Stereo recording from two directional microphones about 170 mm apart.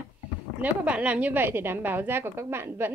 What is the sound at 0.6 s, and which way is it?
A woman's voice, 10° right (ahead or behind).